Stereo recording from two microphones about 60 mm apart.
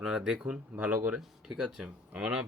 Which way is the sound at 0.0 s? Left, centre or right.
Centre.